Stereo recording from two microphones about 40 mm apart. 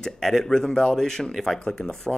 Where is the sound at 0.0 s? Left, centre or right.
Centre.